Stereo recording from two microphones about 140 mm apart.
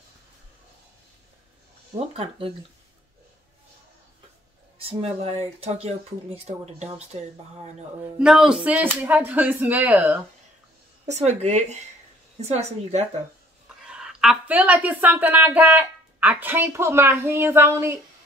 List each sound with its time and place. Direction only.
2.0 s speech: 45° right (ahead or behind)
4.7 s speech: 45° right (ahead or behind)
8.2 s a woman's voice: 5° right (ahead or behind)
11.1 s speech: 50° right (ahead or behind)
13.8 s a woman's voice: 5° right (ahead or behind)